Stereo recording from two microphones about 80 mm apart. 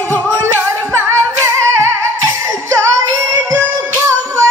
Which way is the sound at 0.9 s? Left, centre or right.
Right.